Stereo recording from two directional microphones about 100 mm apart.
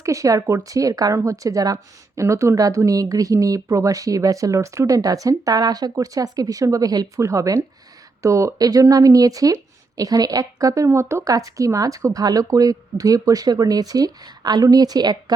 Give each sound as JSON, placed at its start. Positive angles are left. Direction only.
{"t": 0.0, "sound": "speech", "side_deg": -35}